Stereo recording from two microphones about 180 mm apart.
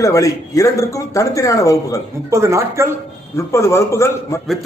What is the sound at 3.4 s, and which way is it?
A man's voice, 15° left (ahead or behind).